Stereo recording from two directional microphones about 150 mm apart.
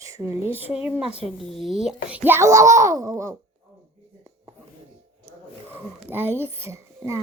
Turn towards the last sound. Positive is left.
turn(degrees=-20)  # may be behind; listen again after turning